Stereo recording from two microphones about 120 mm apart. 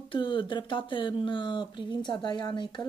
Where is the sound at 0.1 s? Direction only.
45° left (ahead or behind).